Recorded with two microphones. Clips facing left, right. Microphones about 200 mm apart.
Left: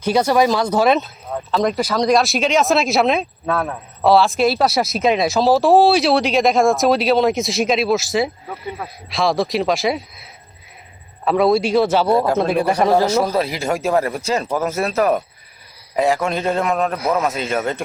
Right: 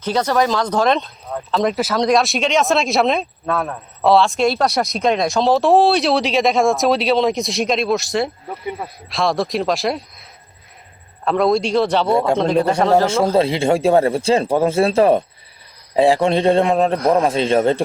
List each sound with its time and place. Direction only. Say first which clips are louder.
0.0 s speech: left 2 dB; 10° left (ahead or behind)
11.3 s speech: left 1 dB; 5° left (ahead or behind)
12.1 s speech: even; 25° right (ahead or behind)
12.4 s a man's voice: right 1 dB; 10° left (ahead or behind)
13.3 s a man's voice: right 5 dB; 30° right (ahead or behind)